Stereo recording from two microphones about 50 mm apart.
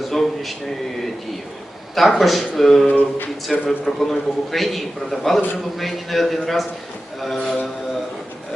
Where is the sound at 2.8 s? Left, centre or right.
Left.